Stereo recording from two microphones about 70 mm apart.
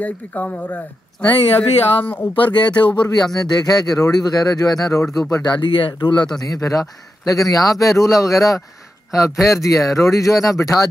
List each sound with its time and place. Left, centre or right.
0.0 s speech: left
2.5 s speech: left
3.3 s speech: left
5.4 s speech: left
6.4 s speech: left